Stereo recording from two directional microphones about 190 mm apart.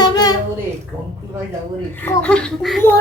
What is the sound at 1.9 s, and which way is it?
Speech, 10° left (ahead or behind).